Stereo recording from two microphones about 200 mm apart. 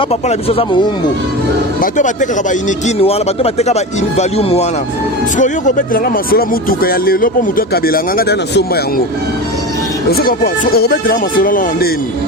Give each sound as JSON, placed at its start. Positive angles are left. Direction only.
{"t": 0.1, "sound": "speech", "side_deg": 30}
{"t": 1.8, "sound": "speech", "side_deg": 40}
{"t": 10.1, "sound": "speech", "side_deg": 50}